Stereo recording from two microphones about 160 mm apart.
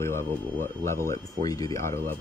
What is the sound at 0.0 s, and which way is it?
Speech, 15° left (ahead or behind).